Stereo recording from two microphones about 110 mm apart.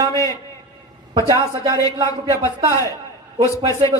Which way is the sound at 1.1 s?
35° right (ahead or behind).